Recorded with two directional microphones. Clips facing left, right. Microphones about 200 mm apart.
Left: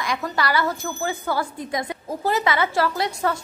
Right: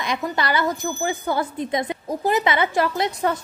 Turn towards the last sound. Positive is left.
turn(degrees=-20)  # may be behind; listen again after turning